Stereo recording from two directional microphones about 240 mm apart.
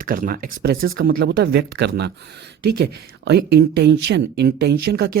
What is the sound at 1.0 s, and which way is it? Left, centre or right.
Speech, right.